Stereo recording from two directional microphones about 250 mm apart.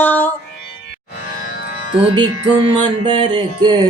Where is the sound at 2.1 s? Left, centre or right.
Centre.